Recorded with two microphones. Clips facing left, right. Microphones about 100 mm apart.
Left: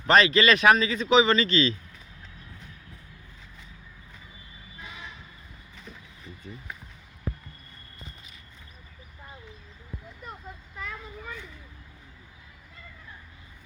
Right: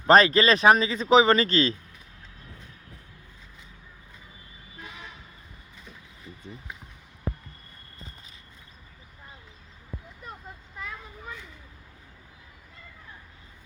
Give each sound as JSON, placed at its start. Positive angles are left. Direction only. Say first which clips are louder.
{"t": 0.1, "sound": "speech", "louder": "right 2 dB", "side_deg": -40}
{"t": 7.3, "sound": "basketball bounce", "louder": "right 2 dB", "side_deg": -40}